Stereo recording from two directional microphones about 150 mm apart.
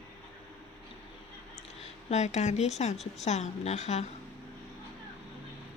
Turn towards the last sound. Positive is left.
turn(degrees=45)  # may be behind; listen again after turning